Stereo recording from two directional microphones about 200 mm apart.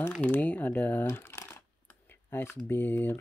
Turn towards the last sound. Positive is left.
turn(degrees=10)  # may be behind; listen again after turning